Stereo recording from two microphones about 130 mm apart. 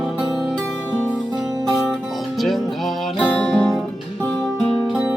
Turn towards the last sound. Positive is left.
turn(degrees=5)  # may be behind; listen again after turning